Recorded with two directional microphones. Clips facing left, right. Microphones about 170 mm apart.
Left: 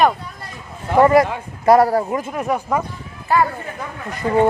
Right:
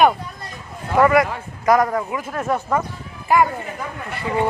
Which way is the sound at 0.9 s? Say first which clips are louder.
Left 3 dB; 30° left (ahead or behind).